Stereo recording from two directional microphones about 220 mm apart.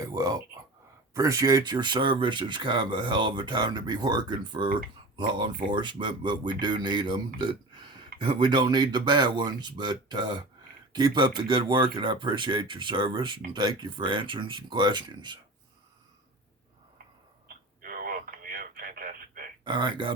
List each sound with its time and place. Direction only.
0.0 s a sound: 15° right (ahead or behind)
1.1 s speech: 15° right (ahead or behind)
7.3 s burping: 20° right (ahead or behind)
8.2 s speech: 20° right (ahead or behind)
17.8 s radio: 40° right (ahead or behind)
19.6 s speech: 20° right (ahead or behind)